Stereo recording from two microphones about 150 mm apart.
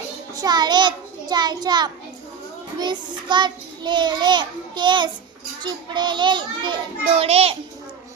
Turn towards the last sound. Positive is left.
turn(degrees=-40)  # may be behind; listen again after turning